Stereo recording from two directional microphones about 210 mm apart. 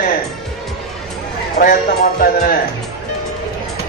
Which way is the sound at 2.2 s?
45° left (ahead or behind).